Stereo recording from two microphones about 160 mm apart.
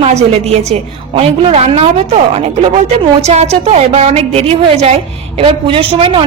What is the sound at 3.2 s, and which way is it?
A woman's voice, 45° right (ahead or behind).